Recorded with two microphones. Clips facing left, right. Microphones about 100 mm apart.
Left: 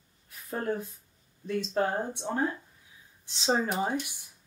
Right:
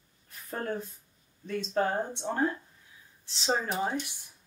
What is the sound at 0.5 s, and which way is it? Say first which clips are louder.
Speech: left 2 dB; 5° left (ahead or behind).